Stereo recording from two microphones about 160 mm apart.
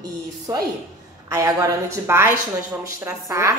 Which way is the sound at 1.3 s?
20° right (ahead or behind).